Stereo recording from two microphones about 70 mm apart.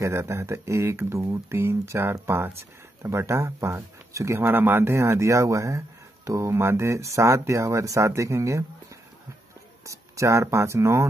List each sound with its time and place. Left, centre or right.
0.0 s speech: right
4.4 s speech: right
9.8 s speech: right